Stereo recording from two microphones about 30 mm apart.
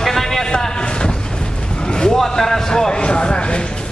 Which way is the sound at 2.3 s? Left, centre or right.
Centre.